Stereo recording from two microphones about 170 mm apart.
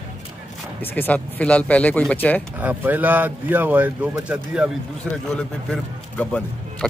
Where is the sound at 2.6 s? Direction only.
10° right (ahead or behind).